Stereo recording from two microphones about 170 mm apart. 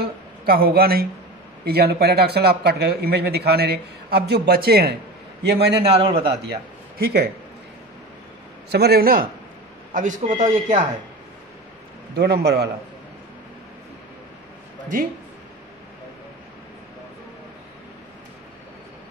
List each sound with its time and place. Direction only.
0.0 s a woman's voice: 60° right (ahead or behind)
5.9 s a man's voice: 35° right (ahead or behind)
6.4 s a man's voice: 70° right (ahead or behind)
8.7 s a man's voice: 70° right (ahead or behind)
9.9 s speech: 50° right (ahead or behind)
12.2 s a man's voice: 75° right (ahead or behind)